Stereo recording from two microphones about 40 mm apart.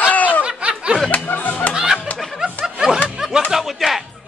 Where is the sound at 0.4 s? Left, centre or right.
Right.